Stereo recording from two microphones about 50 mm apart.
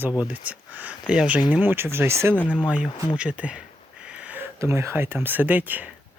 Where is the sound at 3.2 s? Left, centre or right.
Right.